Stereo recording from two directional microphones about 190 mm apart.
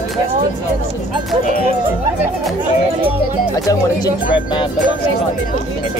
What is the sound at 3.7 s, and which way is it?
Speech, 20° left (ahead or behind).